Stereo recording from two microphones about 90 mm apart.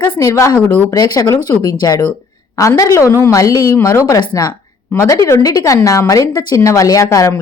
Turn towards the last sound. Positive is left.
turn(degrees=35)  # may be behind; listen again after turning